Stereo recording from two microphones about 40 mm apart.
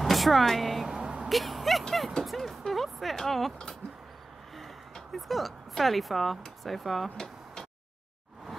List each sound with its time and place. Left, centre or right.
0.0 s speech: centre
0.8 s vehicle: right
1.3 s speech: centre
2.2 s music: centre
4.6 s a sound: centre